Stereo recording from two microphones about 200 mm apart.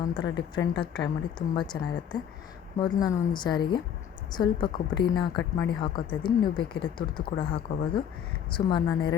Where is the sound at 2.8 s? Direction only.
20° left (ahead or behind).